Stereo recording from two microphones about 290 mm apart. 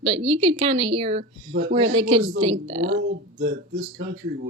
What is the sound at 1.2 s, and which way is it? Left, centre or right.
Speech, right.